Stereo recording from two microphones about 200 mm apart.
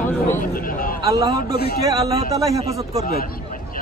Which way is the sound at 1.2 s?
20° right (ahead or behind).